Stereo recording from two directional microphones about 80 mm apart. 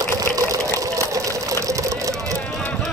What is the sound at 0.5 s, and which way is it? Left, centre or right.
Sewing machine, right.